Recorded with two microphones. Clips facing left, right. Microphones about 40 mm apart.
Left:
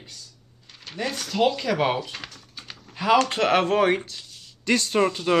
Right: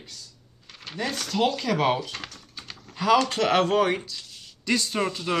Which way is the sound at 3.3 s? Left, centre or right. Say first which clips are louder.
Left 1 dB; left.